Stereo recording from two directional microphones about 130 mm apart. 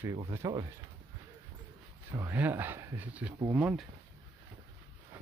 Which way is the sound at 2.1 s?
15° right (ahead or behind).